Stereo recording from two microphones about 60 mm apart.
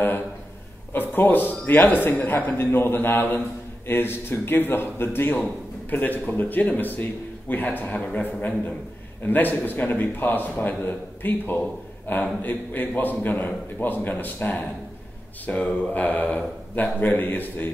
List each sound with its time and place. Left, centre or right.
0.9 s a man's voice: left